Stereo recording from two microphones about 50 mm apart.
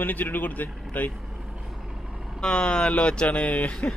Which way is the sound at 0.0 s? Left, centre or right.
Left.